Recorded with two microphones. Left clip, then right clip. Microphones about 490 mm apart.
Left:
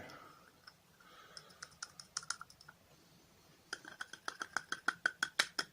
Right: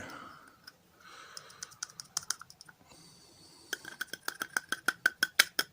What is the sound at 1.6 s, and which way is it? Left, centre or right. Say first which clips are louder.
Computer keyboard: right 6 dB; left.